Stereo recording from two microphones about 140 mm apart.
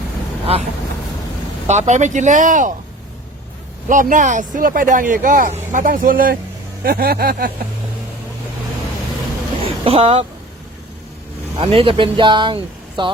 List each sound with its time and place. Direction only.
1.6 s speech: 55° right (ahead or behind)
3.8 s speech: 70° right (ahead or behind); by 7.5 s 90° right
9.6 s speech: 40° right (ahead or behind)
11.5 s speech: 40° right (ahead or behind)